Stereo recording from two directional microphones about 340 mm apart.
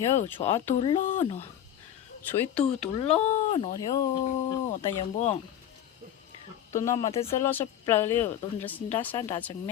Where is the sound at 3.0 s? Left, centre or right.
Centre.